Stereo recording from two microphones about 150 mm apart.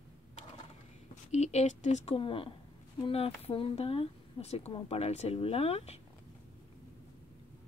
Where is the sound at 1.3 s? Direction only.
50° left (ahead or behind).